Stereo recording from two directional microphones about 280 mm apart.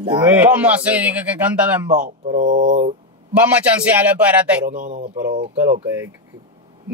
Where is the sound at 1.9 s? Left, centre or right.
Right.